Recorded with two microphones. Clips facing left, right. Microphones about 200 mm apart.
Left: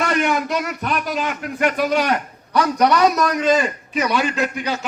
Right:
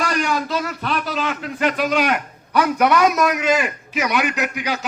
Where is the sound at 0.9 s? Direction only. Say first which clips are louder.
Right 1 dB; 15° left (ahead or behind).